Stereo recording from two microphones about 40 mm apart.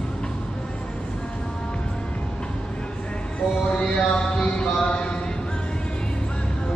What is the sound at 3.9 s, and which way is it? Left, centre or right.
Music, left.